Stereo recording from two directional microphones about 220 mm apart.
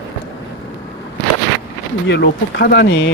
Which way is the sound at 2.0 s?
55° left (ahead or behind).